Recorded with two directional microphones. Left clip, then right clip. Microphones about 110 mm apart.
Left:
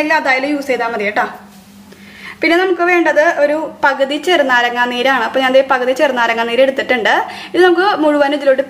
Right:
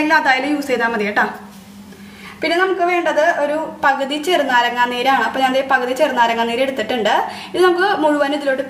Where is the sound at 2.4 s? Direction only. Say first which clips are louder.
Left 4 dB; 35° left (ahead or behind).